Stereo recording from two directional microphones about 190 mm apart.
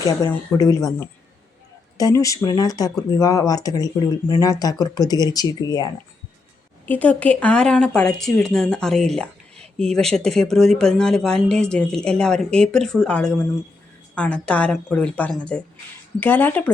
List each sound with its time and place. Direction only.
0.2 s speech: 20° left (ahead or behind)
2.0 s speech: 20° left (ahead or behind)
6.8 s a woman's voice: 10° left (ahead or behind)